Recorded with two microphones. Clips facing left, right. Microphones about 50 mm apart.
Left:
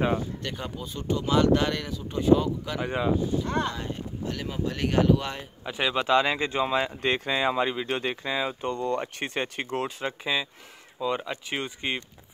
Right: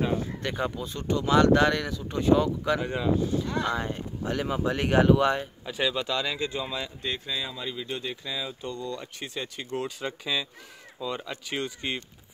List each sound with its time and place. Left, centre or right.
0.4 s speech: centre
0.7 s speech: centre
2.8 s speech: centre
3.6 s speech: centre
5.2 s speech: centre
5.7 s speech: left
7.0 s speech: left
9.8 s speech: left